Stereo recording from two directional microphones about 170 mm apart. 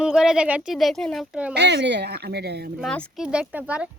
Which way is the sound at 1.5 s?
90° right.